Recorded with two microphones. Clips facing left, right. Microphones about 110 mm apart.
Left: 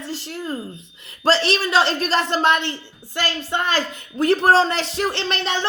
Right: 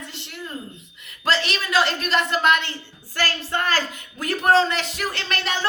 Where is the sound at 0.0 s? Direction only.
35° left (ahead or behind).